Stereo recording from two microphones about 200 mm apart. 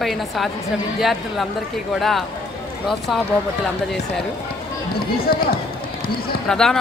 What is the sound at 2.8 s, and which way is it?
Speech, centre (ahead or behind).